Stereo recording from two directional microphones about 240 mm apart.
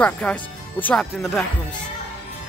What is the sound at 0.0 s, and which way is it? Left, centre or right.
Speech, centre.